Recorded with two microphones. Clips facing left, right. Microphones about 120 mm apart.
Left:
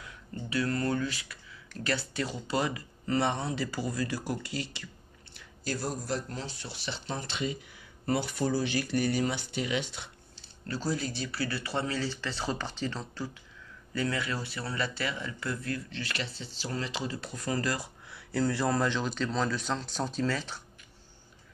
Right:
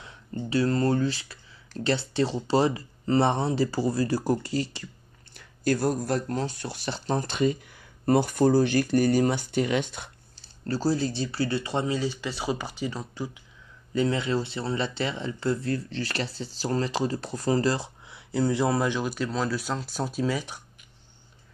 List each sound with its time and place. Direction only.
0.0 s speech: 30° right (ahead or behind)
5.3 s speech: 55° right (ahead or behind); by 20.6 s 15° right (ahead or behind)